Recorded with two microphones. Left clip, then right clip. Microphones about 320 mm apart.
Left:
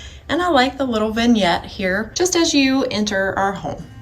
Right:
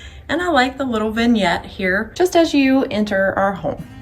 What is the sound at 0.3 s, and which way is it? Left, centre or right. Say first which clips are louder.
A woman's voice: even; centre.